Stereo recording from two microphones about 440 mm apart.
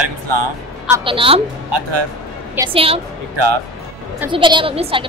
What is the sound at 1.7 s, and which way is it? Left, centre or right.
Speech, right.